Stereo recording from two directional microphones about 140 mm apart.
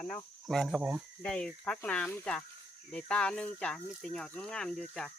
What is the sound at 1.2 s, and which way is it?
Speech, 5° left (ahead or behind).